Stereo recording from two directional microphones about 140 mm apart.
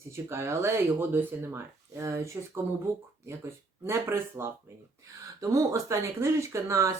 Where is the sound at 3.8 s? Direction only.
15° right (ahead or behind).